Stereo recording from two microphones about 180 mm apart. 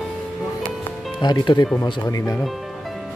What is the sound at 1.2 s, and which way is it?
Speech, 25° left (ahead or behind).